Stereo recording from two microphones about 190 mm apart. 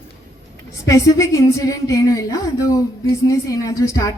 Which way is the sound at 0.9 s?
15° left (ahead or behind).